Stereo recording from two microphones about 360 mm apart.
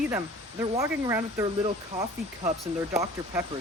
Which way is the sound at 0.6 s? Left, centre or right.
Centre.